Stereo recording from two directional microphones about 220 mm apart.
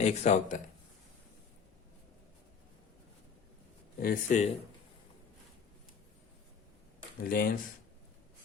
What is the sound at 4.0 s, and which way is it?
Speech, 40° left (ahead or behind).